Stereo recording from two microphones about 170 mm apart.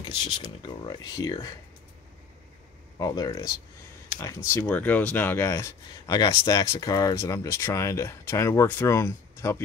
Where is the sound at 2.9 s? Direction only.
20° left (ahead or behind).